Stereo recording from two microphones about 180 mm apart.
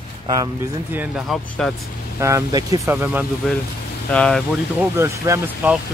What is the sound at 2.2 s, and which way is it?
Speech, 15° right (ahead or behind).